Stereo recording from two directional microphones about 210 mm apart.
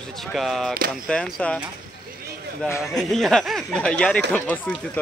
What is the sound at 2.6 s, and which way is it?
Speech, 5° left (ahead or behind).